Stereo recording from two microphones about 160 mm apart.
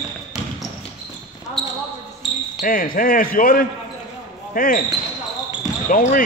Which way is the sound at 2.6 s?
60° left (ahead or behind).